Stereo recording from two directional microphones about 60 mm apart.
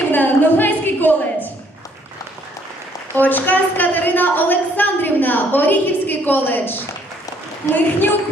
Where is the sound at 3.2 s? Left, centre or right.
Left.